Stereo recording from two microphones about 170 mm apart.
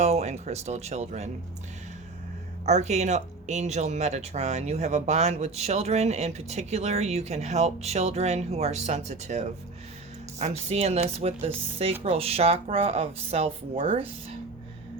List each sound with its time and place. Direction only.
0.0 s speech: 40° right (ahead or behind)
2.6 s speech: 40° right (ahead or behind)